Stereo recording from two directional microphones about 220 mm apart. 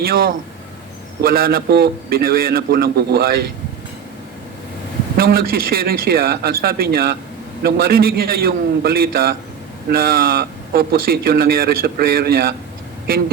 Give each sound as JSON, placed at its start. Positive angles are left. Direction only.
{"t": 0.0, "sound": "a man's voice", "side_deg": -40}
{"t": 5.1, "sound": "a man's voice", "side_deg": -40}